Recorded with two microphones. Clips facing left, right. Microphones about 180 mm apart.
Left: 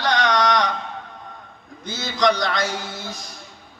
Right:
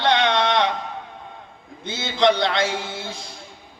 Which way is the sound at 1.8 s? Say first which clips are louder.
Right 2 dB; 25° right (ahead or behind).